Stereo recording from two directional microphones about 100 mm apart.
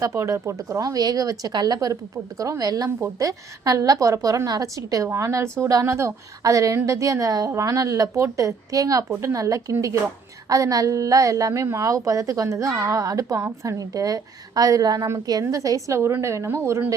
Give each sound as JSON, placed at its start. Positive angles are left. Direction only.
{"t": 0.0, "sound": "a woman's voice", "side_deg": -30}